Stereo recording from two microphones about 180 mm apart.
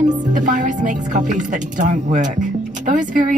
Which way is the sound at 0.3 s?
45° right (ahead or behind).